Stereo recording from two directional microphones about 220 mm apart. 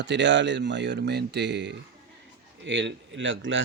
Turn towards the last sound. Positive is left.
turn(degrees=-55)  # may be behind; listen again after turning